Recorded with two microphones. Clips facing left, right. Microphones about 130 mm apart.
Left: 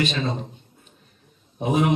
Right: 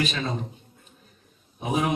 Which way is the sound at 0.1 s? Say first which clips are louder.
Left 3 dB; 30° left (ahead or behind).